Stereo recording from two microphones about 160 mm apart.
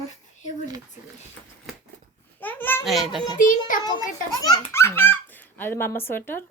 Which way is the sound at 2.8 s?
Centre (ahead or behind).